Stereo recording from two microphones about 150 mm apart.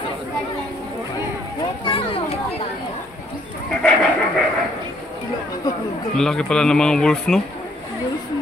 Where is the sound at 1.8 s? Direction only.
35° left (ahead or behind).